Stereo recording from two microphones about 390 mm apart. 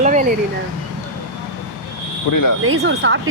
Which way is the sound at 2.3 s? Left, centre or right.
Left.